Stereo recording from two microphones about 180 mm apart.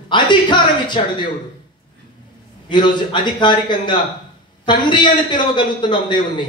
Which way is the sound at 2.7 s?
25° left (ahead or behind).